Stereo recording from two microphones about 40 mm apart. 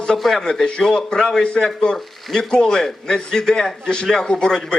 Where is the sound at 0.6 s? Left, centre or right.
Centre.